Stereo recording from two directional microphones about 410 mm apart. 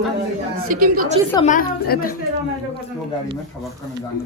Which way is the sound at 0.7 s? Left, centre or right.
Centre.